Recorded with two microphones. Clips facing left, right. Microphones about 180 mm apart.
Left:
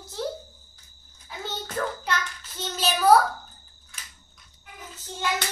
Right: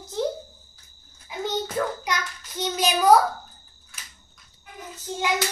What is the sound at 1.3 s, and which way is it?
Hands, 15° right (ahead or behind).